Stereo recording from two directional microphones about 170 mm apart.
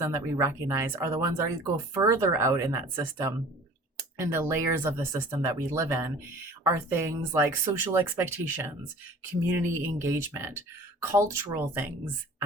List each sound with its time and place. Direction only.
0.0 s speech: 15° right (ahead or behind)
7.6 s speech: 25° right (ahead or behind)